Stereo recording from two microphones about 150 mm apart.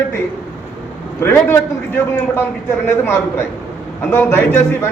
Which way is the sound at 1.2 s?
15° left (ahead or behind).